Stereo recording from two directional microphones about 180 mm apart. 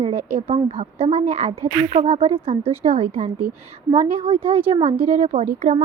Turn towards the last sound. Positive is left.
turn(degrees=-40)  # may be behind; listen again after turning